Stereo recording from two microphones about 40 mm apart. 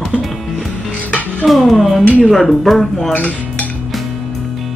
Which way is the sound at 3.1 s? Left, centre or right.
Left.